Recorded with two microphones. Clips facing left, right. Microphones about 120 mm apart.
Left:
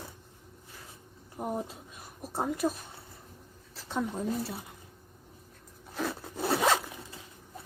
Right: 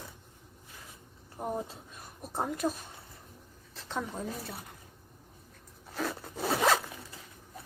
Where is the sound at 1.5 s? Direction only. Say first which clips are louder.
Left 1 dB; 15° left (ahead or behind).